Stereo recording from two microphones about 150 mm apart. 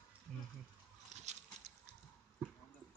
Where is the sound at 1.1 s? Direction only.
50° right (ahead or behind).